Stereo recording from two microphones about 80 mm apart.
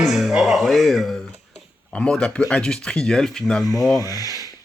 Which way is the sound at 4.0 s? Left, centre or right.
Left.